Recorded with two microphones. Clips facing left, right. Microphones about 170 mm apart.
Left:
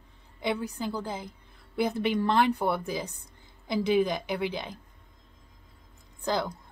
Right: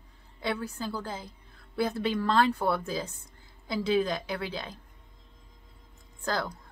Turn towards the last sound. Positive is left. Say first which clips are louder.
# left 2 dB
turn(degrees=20)  # may be behind; listen again after turning